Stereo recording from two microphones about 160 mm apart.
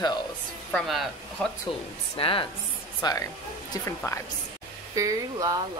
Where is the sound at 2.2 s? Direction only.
35° left (ahead or behind).